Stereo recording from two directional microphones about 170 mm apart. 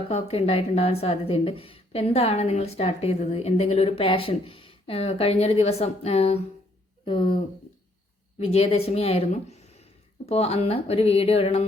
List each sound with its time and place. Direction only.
0.1 s a woman's voice: 35° left (ahead or behind)